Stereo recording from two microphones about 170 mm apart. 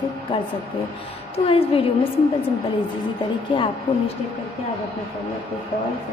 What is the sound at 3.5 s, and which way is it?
Speech, 25° left (ahead or behind).